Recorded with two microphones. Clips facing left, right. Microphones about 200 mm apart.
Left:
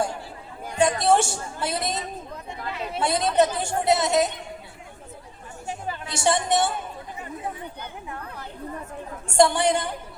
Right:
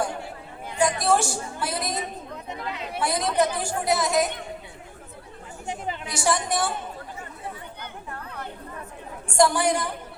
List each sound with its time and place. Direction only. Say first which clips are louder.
0.8 s a woman's voice: left 2 dB; 25° left (ahead or behind)
5.6 s a sound: right 1 dB; 20° right (ahead or behind)
6.1 s speech: left 3 dB; 25° left (ahead or behind)
9.2 s speech: left 2 dB; 25° left (ahead or behind)